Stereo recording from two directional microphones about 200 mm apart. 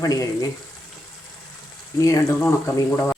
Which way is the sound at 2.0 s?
15° left (ahead or behind).